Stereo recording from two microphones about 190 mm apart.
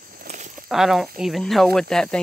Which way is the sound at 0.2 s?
45° right (ahead or behind).